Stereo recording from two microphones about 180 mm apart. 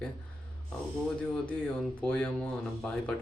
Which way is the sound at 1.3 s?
5° left (ahead or behind).